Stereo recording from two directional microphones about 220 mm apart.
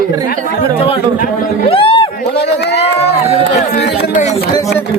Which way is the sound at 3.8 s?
50° left (ahead or behind).